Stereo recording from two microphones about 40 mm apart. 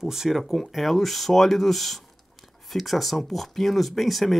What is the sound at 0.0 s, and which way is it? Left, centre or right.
Speech, centre.